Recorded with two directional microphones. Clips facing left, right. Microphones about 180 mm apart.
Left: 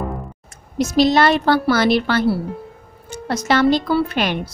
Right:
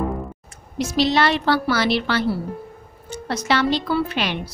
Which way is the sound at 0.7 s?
45° left (ahead or behind).